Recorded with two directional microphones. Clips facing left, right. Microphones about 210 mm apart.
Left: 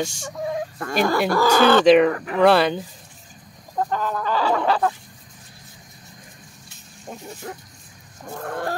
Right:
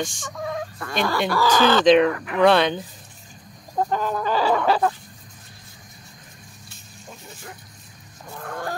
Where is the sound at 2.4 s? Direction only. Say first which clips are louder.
Left 1 dB; 5° left (ahead or behind).